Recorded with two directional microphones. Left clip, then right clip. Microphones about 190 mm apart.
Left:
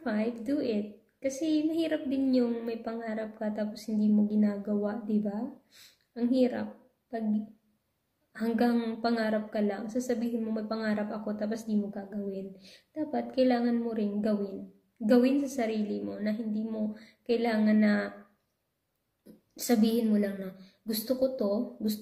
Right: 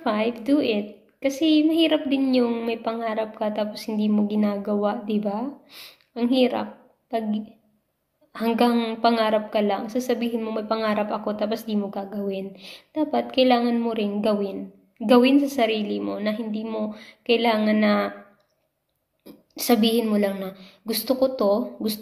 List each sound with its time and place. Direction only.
0.0 s a woman's voice: 20° left (ahead or behind)
19.5 s a woman's voice: 20° left (ahead or behind)